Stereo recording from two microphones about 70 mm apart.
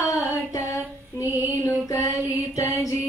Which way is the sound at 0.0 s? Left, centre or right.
Left.